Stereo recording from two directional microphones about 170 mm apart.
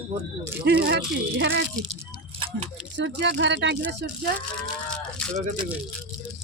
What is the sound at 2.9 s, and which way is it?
Speech, 90° right.